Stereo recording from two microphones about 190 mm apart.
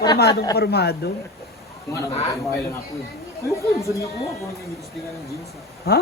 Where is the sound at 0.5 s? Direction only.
60° left (ahead or behind).